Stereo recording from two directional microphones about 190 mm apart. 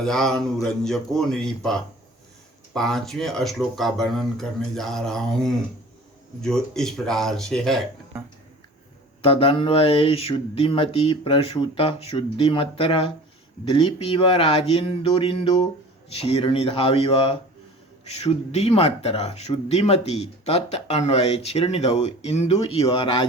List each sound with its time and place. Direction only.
0.0 s speech: 5° left (ahead or behind)
9.2 s speech: 30° left (ahead or behind)